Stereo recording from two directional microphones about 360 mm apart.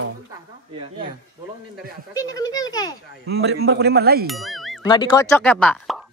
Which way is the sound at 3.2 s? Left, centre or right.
Right.